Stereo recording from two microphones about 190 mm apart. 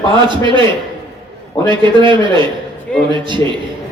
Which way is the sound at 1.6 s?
25° right (ahead or behind).